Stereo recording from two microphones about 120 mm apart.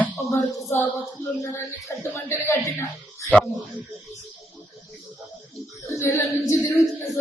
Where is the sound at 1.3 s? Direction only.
25° left (ahead or behind).